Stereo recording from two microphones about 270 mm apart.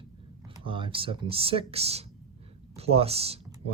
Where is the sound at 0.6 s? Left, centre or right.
Centre.